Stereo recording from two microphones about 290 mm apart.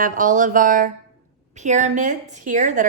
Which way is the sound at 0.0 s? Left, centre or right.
Right.